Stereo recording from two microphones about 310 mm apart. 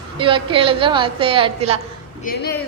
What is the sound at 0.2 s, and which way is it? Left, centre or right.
A woman's voice, centre.